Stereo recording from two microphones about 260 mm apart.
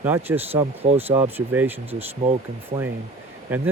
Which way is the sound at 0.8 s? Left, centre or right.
Right.